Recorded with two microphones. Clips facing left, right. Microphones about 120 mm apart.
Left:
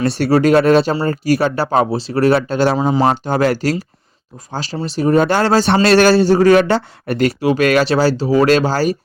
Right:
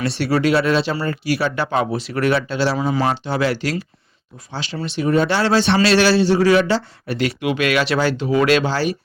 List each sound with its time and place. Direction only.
0.4 s speech: 45° left (ahead or behind)
5.7 s speech: 50° left (ahead or behind)